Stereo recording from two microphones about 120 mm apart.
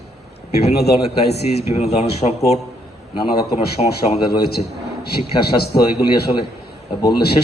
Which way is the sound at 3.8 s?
65° left (ahead or behind).